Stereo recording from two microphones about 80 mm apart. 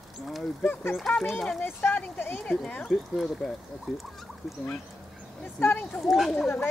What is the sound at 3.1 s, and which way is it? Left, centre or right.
Speech, centre.